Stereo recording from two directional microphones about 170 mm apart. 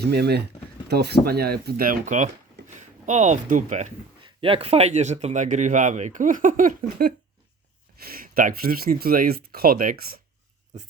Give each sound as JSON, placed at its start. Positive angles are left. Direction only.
{"t": 0.0, "sound": "speech", "side_deg": -75}
{"t": 4.2, "sound": "speech", "side_deg": -30}